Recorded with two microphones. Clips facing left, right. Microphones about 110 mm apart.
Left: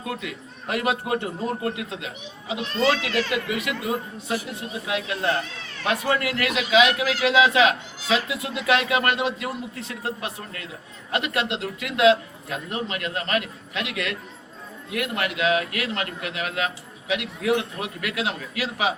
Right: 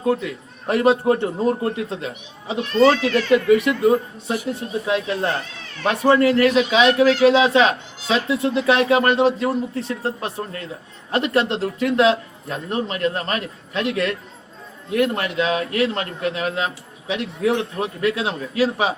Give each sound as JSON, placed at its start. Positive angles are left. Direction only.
{"t": 0.0, "sound": "a man's voice", "side_deg": -30}